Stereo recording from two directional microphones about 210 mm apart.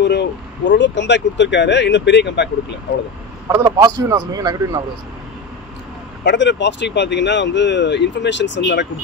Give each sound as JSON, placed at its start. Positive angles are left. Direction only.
{"t": 0.0, "sound": "speech", "side_deg": 55}
{"t": 3.4, "sound": "a man's voice", "side_deg": -15}
{"t": 6.2, "sound": "speech", "side_deg": 55}